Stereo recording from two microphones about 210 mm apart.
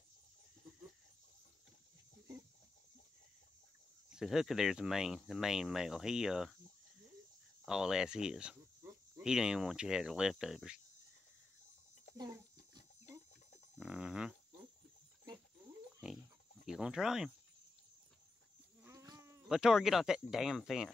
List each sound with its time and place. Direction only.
4.1 s speech: centre (ahead or behind)
7.6 s speech: 5° right (ahead or behind)
12.2 s a sound: 15° right (ahead or behind)
13.7 s a sound: 5° right (ahead or behind)
16.6 s speech: 5° right (ahead or behind)
18.8 s goat: 15° right (ahead or behind)
19.5 s speech: 5° right (ahead or behind)